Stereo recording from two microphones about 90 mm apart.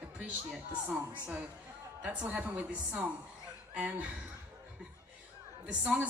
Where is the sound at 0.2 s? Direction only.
15° right (ahead or behind).